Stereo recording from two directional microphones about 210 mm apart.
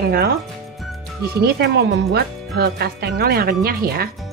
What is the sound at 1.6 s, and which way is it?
Speech, 50° right (ahead or behind).